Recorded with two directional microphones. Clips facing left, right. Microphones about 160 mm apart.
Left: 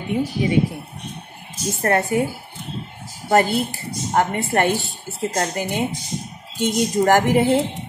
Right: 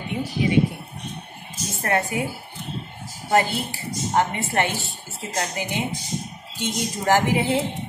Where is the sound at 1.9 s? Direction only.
35° left (ahead or behind).